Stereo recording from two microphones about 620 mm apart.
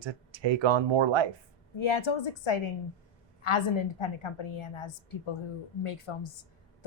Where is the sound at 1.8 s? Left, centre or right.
Left.